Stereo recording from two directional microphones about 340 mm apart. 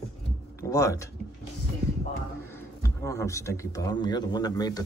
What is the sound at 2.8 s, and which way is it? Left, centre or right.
A man's voice, centre.